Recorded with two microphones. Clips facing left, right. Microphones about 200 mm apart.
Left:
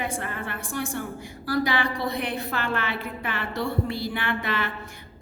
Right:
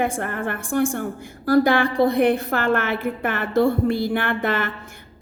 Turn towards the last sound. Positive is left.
turn(degrees=-50)  # may be behind; listen again after turning